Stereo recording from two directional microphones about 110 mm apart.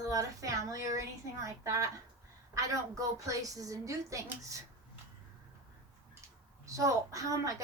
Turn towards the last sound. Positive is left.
turn(degrees=-30)  # may be behind; listen again after turning